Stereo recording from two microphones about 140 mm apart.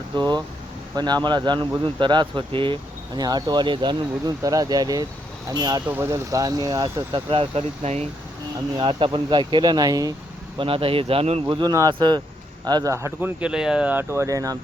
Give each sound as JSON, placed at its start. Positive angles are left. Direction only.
{"t": 0.2, "sound": "speech", "side_deg": -30}
{"t": 5.9, "sound": "speech", "side_deg": -20}
{"t": 8.8, "sound": "speech", "side_deg": -35}
{"t": 10.6, "sound": "speech", "side_deg": -40}
{"t": 11.4, "sound": "speech", "side_deg": -30}
{"t": 13.4, "sound": "speech", "side_deg": -5}